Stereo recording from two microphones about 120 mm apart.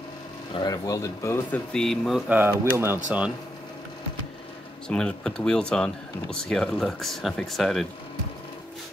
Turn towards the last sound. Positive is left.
turn(degrees=0)  # may be behind; listen again after turning